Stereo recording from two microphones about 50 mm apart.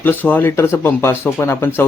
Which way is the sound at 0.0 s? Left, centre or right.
Left.